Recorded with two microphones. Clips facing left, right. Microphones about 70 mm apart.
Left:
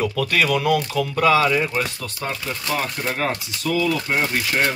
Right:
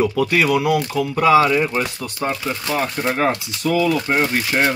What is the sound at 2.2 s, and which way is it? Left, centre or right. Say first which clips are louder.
Speech: right 4 dB; right.